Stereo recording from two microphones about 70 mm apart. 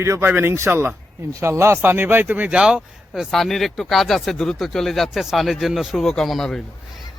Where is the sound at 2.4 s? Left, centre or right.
Centre.